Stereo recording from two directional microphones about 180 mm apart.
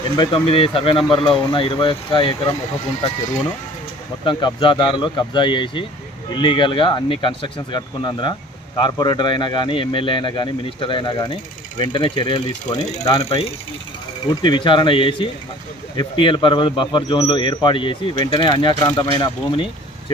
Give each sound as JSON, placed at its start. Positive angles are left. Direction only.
{"t": 0.2, "sound": "a man's voice", "side_deg": 30}
{"t": 4.2, "sound": "a man's voice", "side_deg": 25}
{"t": 13.2, "sound": "a man's voice", "side_deg": 35}